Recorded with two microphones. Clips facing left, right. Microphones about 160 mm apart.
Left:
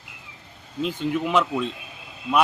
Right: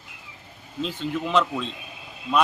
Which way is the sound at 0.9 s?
10° left (ahead or behind).